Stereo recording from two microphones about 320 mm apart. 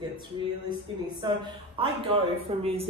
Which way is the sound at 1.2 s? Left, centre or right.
Centre.